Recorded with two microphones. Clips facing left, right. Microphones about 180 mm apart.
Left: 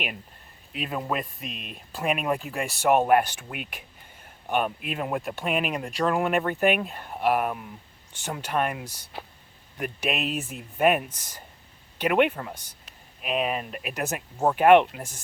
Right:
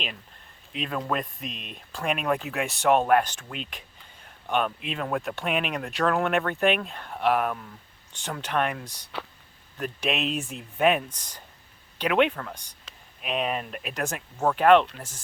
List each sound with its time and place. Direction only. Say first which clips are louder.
0.7 s speech: even; 5° left (ahead or behind)
9.1 s speech: right 4 dB; 75° right (ahead or behind)
9.7 s speech: even; 10° left (ahead or behind)
12.9 s a sound: right 5 dB; 90° right
13.2 s speech: left 1 dB; 5° left (ahead or behind)